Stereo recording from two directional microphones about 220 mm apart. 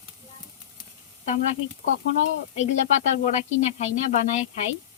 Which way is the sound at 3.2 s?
35° left (ahead or behind).